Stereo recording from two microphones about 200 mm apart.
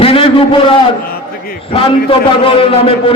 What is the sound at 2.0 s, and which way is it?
Speech, 25° left (ahead or behind).